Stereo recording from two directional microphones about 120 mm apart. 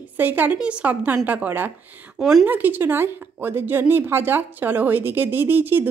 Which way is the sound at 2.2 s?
5° right (ahead or behind).